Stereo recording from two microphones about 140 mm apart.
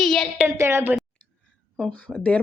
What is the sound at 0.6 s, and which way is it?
Speech, 20° right (ahead or behind).